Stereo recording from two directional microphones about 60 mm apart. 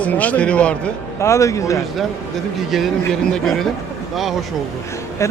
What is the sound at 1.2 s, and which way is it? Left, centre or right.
Speech, left.